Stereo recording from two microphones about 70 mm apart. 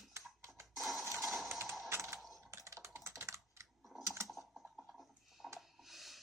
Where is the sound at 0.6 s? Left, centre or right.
Centre.